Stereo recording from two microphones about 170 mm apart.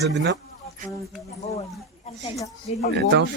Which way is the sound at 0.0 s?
90° right.